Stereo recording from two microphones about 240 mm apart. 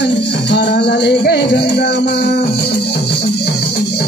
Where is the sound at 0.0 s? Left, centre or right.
Left.